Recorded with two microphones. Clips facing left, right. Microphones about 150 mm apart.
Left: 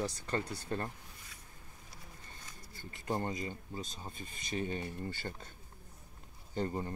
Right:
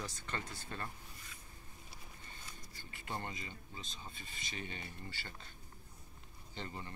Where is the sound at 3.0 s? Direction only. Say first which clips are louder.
Left 8 dB; 40° left (ahead or behind).